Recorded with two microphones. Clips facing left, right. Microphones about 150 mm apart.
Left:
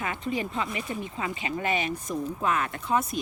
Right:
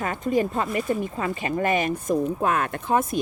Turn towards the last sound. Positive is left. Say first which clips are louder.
# right 4 dB
turn(degrees=-50)  # may be behind; listen again after turning